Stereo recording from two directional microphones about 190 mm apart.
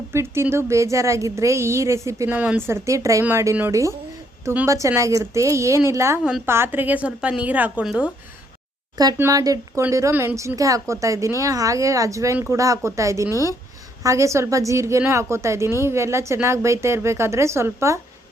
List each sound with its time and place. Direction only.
0.1 s speech: 15° right (ahead or behind)
9.0 s speech: 15° right (ahead or behind)
13.3 s speech: 15° left (ahead or behind)
14.0 s speech: 15° right (ahead or behind)